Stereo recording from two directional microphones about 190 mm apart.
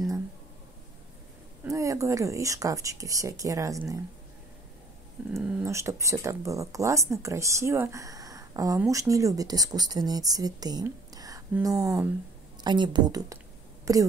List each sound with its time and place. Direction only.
1.6 s speech: 15° right (ahead or behind)
5.3 s a woman's voice: 10° right (ahead or behind)